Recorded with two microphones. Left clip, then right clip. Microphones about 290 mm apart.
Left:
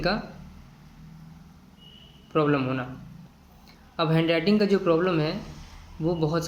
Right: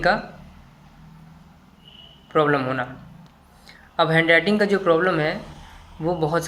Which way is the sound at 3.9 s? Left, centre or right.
Right.